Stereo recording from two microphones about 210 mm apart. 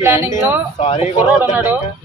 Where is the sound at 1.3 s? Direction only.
10° right (ahead or behind).